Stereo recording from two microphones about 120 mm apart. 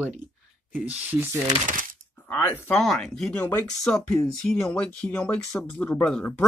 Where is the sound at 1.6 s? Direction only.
90° right.